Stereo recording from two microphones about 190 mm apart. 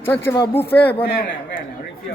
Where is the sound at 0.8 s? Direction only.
60° left (ahead or behind).